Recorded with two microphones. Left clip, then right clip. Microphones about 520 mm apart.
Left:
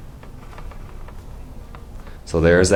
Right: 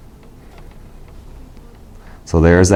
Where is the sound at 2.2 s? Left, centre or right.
Right.